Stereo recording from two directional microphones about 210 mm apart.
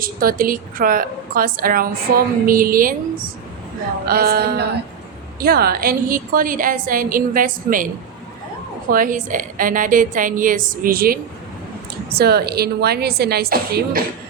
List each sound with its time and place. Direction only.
0.0 s a woman's voice: 45° right (ahead or behind)
4.0 s a woman's voice: 45° right (ahead or behind)
8.9 s a woman's voice: 40° right (ahead or behind)